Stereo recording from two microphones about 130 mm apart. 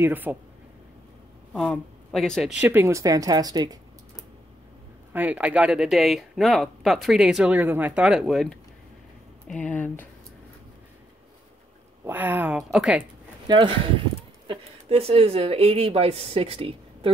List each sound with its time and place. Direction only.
0.0 s speech: 15° right (ahead or behind)
1.5 s speech: centre (ahead or behind)
2.7 s speech: 20° right (ahead or behind)
5.1 s speech: 10° right (ahead or behind); by 10.0 s 10° left (ahead or behind)
12.0 s speech: 15° right (ahead or behind)
12.5 s speech: 5° right (ahead or behind)
13.5 s speech: 40° right (ahead or behind)